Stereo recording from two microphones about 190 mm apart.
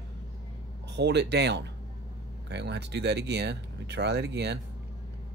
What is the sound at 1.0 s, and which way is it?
Speech, 60° right (ahead or behind).